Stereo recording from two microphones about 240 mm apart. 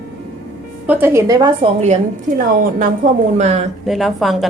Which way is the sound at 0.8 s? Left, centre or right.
Centre.